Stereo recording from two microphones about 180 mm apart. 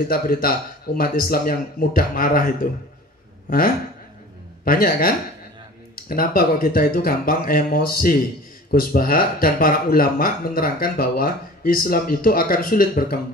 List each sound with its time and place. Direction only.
0.1 s a man's voice: 55° left (ahead or behind)